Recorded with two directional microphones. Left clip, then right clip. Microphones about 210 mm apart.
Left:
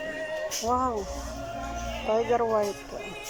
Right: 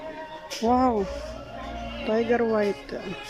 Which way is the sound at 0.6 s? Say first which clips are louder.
Right 6 dB; 25° right (ahead or behind).